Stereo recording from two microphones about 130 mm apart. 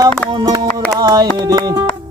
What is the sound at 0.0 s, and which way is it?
Music, 30° right (ahead or behind).